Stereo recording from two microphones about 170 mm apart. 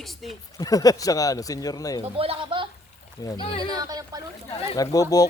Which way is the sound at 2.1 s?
35° right (ahead or behind).